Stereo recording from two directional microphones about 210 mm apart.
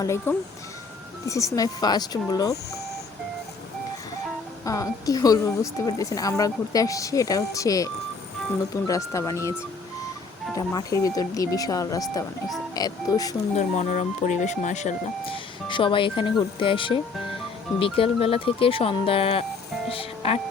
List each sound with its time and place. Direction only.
0.0 s speech: 15° left (ahead or behind)
4.6 s speech: 15° left (ahead or behind)
13.6 s speech: 35° left (ahead or behind)